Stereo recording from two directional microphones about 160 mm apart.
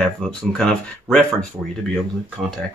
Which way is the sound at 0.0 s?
Centre (ahead or behind).